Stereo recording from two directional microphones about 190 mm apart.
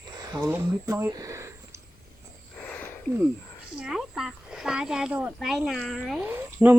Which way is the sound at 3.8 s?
5° right (ahead or behind).